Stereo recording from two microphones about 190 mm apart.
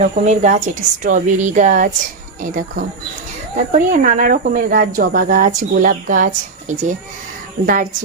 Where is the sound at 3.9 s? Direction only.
45° right (ahead or behind).